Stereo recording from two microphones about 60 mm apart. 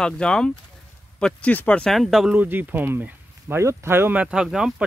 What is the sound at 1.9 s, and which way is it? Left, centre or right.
Speech, centre.